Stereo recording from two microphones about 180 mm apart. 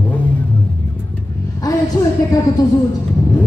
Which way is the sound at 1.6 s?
20° left (ahead or behind).